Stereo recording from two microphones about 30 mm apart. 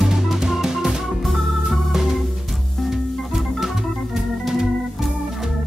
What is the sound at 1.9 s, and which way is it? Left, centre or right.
Organ, centre.